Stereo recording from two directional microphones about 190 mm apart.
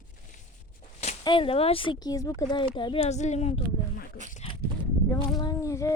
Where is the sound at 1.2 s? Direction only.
25° left (ahead or behind).